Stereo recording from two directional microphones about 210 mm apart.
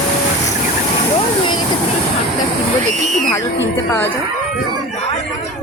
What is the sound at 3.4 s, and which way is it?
Speech, 60° left (ahead or behind).